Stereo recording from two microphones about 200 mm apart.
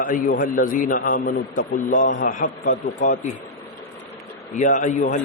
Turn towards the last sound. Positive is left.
turn(degrees=40)  # may be behind; listen again after turning